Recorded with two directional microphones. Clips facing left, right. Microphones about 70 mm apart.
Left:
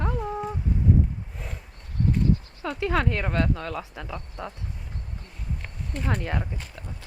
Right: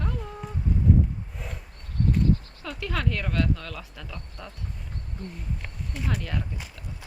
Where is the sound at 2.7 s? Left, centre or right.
Left.